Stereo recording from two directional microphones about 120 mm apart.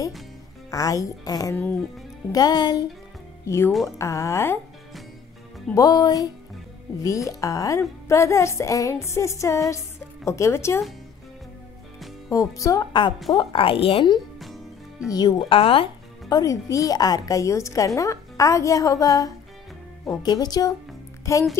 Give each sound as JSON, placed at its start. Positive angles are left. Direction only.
{"t": 0.7, "sound": "a woman's voice", "side_deg": 30}
{"t": 3.4, "sound": "a woman's voice", "side_deg": 25}
{"t": 5.8, "sound": "a woman's voice", "side_deg": 35}
{"t": 12.3, "sound": "a woman's voice", "side_deg": 30}
{"t": 13.4, "sound": "a woman's voice", "side_deg": 50}
{"t": 14.4, "sound": "music", "side_deg": 0}
{"t": 15.0, "sound": "a woman's voice", "side_deg": 35}
{"t": 16.3, "sound": "a woman's voice", "side_deg": 30}